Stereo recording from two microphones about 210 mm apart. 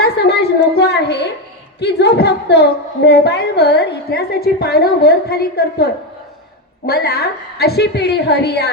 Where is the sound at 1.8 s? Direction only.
55° left (ahead or behind).